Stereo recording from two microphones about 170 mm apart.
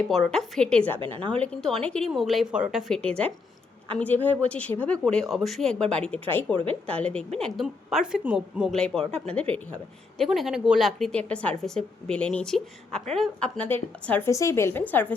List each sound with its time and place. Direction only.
0.1 s a woman's voice: centre (ahead or behind)
0.9 s a woman's voice: 30° right (ahead or behind)
1.4 s a woman's voice: 5° left (ahead or behind)